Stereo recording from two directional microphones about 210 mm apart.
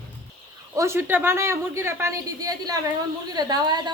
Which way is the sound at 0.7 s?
15° right (ahead or behind).